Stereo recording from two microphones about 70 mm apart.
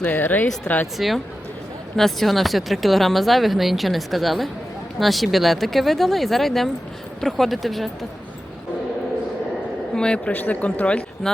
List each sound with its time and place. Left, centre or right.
0.0 s speech: left
0.9 s speech: centre
9.9 s speech: centre